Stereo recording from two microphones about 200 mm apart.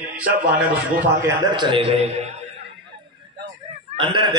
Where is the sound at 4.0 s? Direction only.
25° right (ahead or behind).